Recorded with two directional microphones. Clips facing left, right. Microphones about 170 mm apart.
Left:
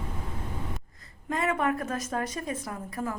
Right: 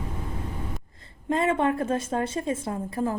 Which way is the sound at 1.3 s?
25° right (ahead or behind).